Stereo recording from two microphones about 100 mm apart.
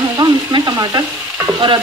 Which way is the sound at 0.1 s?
45° right (ahead or behind).